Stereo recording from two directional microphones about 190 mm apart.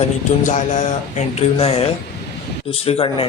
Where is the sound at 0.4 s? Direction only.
40° left (ahead or behind).